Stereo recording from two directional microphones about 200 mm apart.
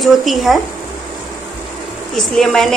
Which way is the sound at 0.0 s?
Centre (ahead or behind).